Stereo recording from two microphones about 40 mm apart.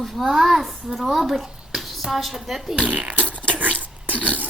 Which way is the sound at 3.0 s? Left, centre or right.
Right.